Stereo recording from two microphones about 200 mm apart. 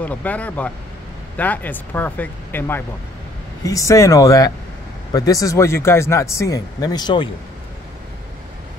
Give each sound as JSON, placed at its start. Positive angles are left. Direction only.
{"t": 0.0, "sound": "speech", "side_deg": 5}